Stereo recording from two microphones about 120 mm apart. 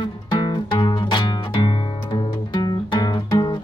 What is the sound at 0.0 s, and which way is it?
Music, 40° left (ahead or behind).